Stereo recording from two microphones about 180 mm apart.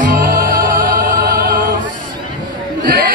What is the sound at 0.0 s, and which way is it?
Music, 50° right (ahead or behind).